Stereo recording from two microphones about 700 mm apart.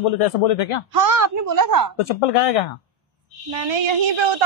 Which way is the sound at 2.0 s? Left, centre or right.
Left.